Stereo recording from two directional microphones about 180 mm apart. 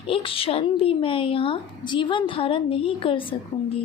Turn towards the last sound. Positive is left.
turn(degrees=30)  # may be behind; listen again after turning